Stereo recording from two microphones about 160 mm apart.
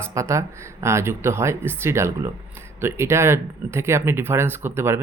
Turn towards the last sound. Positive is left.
turn(degrees=-15)  # may be behind; listen again after turning